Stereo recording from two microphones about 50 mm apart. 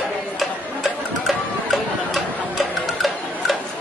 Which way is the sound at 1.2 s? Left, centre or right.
Centre.